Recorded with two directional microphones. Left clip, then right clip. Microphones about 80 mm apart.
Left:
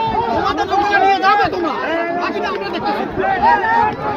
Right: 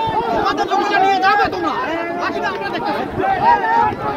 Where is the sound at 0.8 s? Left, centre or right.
Right.